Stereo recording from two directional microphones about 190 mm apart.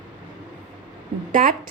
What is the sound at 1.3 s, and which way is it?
Speech, 45° right (ahead or behind).